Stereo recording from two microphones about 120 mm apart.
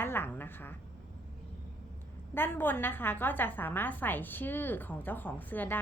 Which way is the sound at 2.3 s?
15° left (ahead or behind).